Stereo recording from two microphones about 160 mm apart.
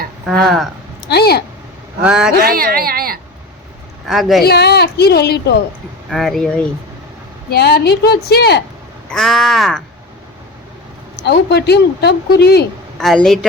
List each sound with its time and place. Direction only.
0.3 s caw: centre (ahead or behind)
1.0 s a woman's voice: 85° left
2.0 s caw: 5° right (ahead or behind)
2.4 s a woman's voice: 65° right (ahead or behind)
4.0 s caw: centre (ahead or behind)
4.4 s a woman's voice: 90° left
6.1 s caw: centre (ahead or behind)
7.5 s a woman's voice: 85° left
9.0 s caw: centre (ahead or behind)
11.2 s a woman's voice: 90° left
13.0 s caw: centre (ahead or behind)